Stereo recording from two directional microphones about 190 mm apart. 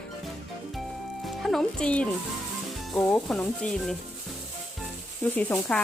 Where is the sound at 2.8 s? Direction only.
Centre (ahead or behind).